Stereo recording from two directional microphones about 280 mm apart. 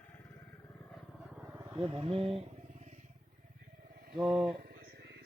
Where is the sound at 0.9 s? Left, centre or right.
Centre; by 2.9 s right.